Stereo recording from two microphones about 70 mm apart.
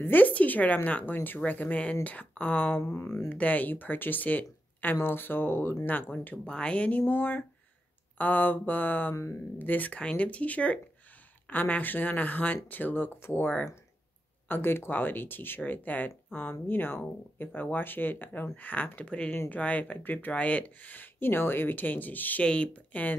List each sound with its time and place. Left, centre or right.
0.0 s speech: left
2.8 s speech: left
3.3 s speech: left
6.4 s speech: centre
9.1 s speech: left
9.6 s speech: left
14.5 s speech: left